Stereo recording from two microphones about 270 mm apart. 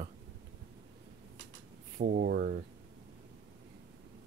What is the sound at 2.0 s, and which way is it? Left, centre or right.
Speech, right.